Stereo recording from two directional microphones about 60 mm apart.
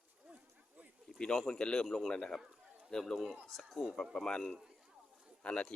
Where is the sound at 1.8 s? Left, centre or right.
Centre.